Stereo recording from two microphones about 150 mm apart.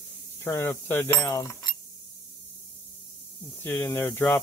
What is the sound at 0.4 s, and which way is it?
Cutlery, 20° left (ahead or behind).